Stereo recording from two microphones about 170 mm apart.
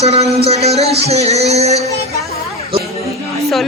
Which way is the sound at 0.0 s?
35° right (ahead or behind).